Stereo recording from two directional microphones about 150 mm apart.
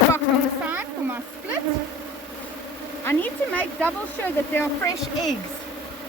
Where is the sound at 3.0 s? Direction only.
10° left (ahead or behind).